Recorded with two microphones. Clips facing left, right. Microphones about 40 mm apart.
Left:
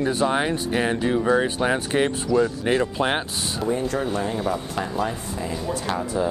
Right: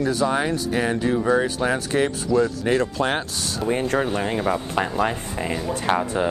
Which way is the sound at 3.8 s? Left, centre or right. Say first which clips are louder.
Right 2 dB; right.